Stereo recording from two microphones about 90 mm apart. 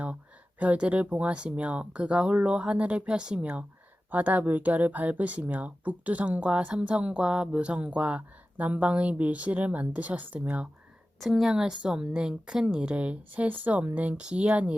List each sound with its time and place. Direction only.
0.6 s speech: 15° right (ahead or behind)
11.2 s a woman's voice: 5° right (ahead or behind)